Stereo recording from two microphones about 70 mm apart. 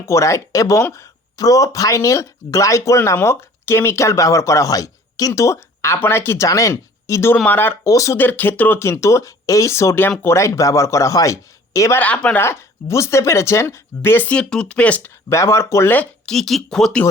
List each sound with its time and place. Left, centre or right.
0.0 s speech: left
3.2 s speech: left
6.5 s speech: left
7.4 s speech: left
7.9 s speech: left
8.1 s speech: left
8.8 s speech: left
11.9 s speech: centre
12.4 s speech: left
14.3 s speech: centre
15.0 s speech: left
16.2 s speech: centre